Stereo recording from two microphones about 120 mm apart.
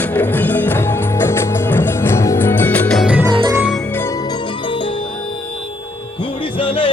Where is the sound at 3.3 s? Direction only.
40° right (ahead or behind).